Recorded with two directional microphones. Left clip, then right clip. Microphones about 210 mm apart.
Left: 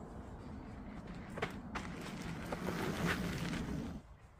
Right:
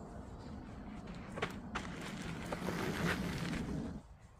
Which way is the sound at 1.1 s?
Centre (ahead or behind).